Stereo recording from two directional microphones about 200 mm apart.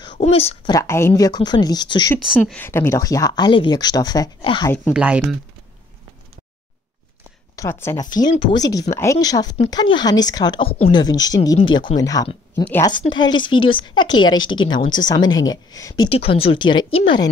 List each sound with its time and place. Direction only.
0.2 s speech: 30° left (ahead or behind)
0.7 s speech: 15° left (ahead or behind)
2.3 s speech: 5° left (ahead or behind); by 4.7 s 25° left (ahead or behind)
4.9 s speech: 5° right (ahead or behind)
7.5 s speech: 15° left (ahead or behind)
16.1 s speech: 30° left (ahead or behind)